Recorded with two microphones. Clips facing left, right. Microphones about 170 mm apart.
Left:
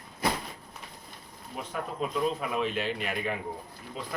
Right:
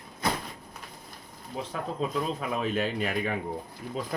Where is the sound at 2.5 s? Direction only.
45° right (ahead or behind).